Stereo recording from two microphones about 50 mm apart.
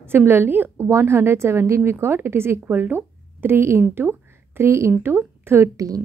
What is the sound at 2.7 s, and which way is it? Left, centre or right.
A woman's voice, right.